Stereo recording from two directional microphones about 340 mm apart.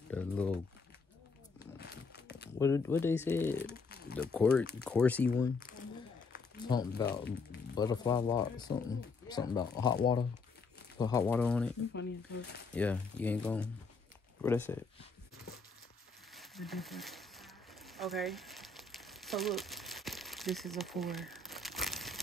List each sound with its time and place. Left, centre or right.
0.1 s speech: centre
1.8 s a sound: left
2.6 s speech: centre
3.5 s crumpling: left
4.2 s speech: centre
6.7 s speech: centre
11.9 s speech: left
12.7 s speech: centre
16.3 s a sound: centre